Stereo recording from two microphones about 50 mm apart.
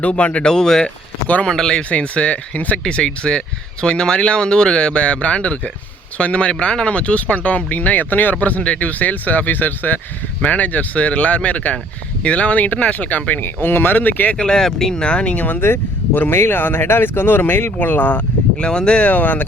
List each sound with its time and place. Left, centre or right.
0.0 s speech: left
0.5 s speech: centre
1.9 s speech: left
2.8 s speech: centre
13.4 s speech: left
14.3 s speech: centre
15.0 s speech: left
15.6 s speech: left
18.6 s speech: centre; by 19.5 s left